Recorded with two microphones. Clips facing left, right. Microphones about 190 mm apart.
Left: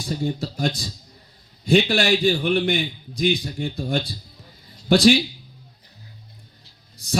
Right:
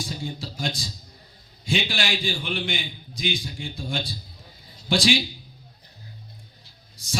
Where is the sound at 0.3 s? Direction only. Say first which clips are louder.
Left 6 dB; 60° left (ahead or behind).